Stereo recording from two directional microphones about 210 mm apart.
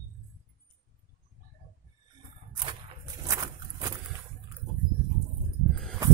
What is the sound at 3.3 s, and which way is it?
Patter, 15° right (ahead or behind).